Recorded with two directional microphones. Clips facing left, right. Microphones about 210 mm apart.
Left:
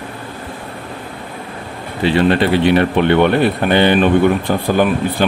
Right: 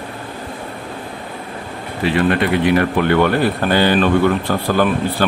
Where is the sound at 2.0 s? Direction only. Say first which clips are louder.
Left 3 dB; 30° left (ahead or behind).